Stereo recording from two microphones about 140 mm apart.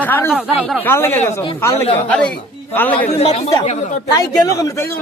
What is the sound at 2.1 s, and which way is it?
Speech, 10° left (ahead or behind).